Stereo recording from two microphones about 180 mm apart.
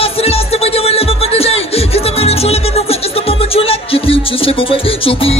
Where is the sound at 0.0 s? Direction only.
35° left (ahead or behind).